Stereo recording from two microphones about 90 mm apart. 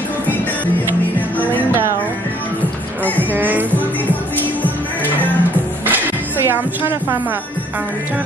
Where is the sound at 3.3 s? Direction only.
20° right (ahead or behind).